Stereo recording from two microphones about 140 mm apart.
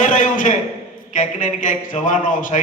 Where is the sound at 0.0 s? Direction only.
65° left (ahead or behind).